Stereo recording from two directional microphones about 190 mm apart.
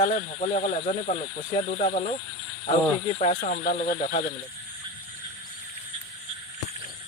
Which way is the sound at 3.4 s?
50° left (ahead or behind).